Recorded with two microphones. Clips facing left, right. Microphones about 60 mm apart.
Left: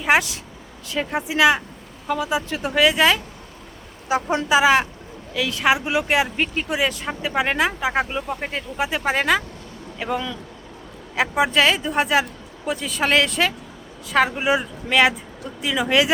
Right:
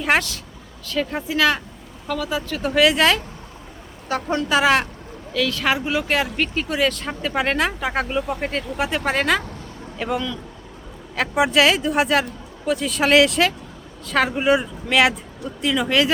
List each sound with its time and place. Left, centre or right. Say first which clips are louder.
0.0 s speech: left 1 dB; centre
2.6 s speech: right 1 dB; centre
4.1 s speech: left 2 dB; centre
5.3 s speech: left 1 dB; centre
11.3 s speech: right 2 dB; centre